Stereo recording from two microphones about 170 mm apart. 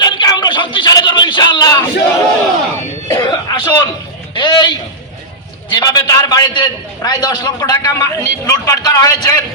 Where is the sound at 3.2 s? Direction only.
25° left (ahead or behind).